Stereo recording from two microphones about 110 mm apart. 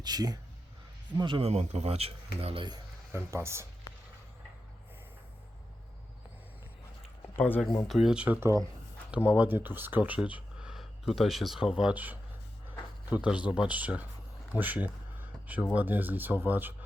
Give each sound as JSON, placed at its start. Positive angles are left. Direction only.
{"t": 0.0, "sound": "speech", "side_deg": -35}
{"t": 1.5, "sound": "speech", "side_deg": -75}
{"t": 3.1, "sound": "speech", "side_deg": -25}
{"t": 7.3, "sound": "speech", "side_deg": 20}
{"t": 7.9, "sound": "speech", "side_deg": -5}
{"t": 8.4, "sound": "speech", "side_deg": -25}
{"t": 9.1, "sound": "speech", "side_deg": -10}
{"t": 14.5, "sound": "a sound", "side_deg": -15}
{"t": 15.7, "sound": "speech", "side_deg": -15}